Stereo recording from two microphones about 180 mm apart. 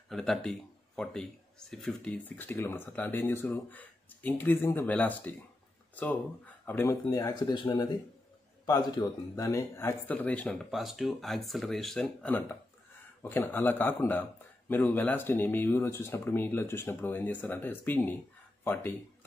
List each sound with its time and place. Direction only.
0.1 s speech: 5° left (ahead or behind)